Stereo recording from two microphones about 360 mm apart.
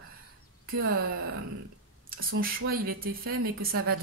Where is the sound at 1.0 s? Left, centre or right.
Right.